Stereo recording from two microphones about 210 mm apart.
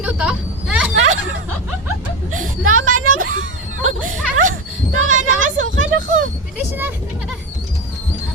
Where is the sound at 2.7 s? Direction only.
75° right (ahead or behind).